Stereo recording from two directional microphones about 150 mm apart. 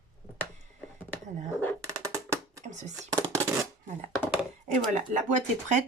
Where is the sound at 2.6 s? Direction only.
55° right (ahead or behind).